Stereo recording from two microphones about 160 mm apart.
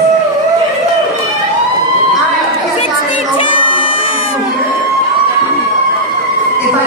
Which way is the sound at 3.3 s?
35° left (ahead or behind).